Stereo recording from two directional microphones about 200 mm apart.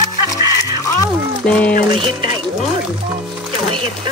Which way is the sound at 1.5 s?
5° left (ahead or behind).